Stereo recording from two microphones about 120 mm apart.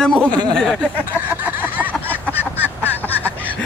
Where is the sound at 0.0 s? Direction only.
10° left (ahead or behind).